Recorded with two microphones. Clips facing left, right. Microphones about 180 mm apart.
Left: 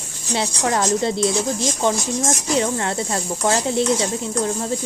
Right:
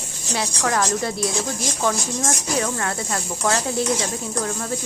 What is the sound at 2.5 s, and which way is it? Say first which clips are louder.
A woman's voice: left 4 dB; 25° left (ahead or behind).